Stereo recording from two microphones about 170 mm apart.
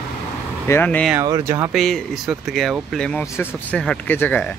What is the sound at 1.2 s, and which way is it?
Speech, 15° right (ahead or behind).